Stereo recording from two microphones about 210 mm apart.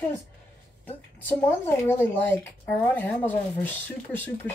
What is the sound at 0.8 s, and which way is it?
Speech, 10° left (ahead or behind).